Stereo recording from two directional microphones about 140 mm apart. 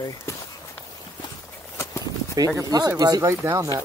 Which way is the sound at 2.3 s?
25° right (ahead or behind).